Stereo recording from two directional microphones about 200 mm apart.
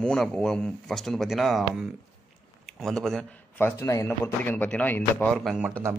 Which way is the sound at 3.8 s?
15° left (ahead or behind).